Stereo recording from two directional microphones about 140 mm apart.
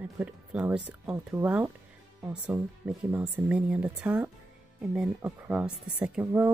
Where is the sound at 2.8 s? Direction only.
10° right (ahead or behind).